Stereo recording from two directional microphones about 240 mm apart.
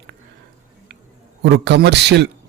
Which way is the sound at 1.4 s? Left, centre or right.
Right.